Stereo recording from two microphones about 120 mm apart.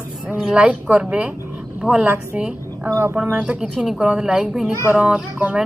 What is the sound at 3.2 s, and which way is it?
Speech, 10° right (ahead or behind).